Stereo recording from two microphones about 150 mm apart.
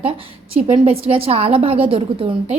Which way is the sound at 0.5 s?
40° right (ahead or behind).